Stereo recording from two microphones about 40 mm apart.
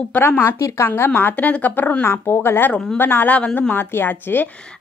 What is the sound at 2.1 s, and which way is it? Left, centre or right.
Speech, left.